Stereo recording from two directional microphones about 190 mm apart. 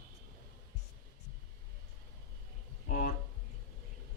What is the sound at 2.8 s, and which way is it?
Speech, 45° left (ahead or behind).